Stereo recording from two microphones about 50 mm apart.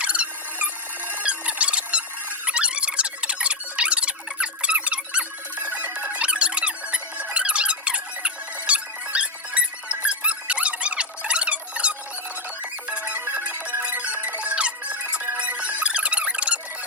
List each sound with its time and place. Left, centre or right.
0.0 s music: right
1.2 s squeak: right
12.9 s music: right